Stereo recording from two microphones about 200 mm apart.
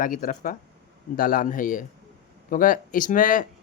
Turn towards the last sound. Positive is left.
turn(degrees=40)  # may be behind; listen again after turning